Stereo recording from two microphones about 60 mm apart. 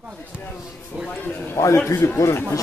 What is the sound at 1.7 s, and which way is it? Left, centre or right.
Speech, left.